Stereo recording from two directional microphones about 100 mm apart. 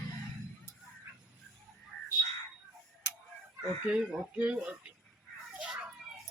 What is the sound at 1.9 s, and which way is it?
Crow, 10° left (ahead or behind).